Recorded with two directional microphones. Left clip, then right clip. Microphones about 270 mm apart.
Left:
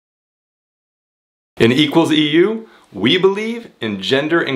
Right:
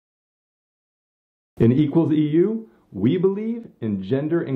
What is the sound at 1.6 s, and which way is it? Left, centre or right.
Speech, centre.